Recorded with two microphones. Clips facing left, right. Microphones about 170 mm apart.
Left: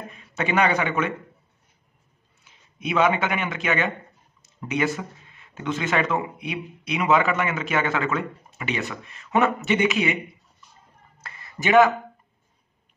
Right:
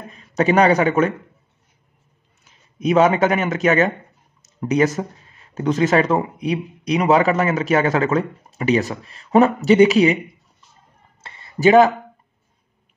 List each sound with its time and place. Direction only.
0.1 s a man's voice: 40° right (ahead or behind)
2.4 s speech: 40° right (ahead or behind)
11.1 s a sound: 25° right (ahead or behind)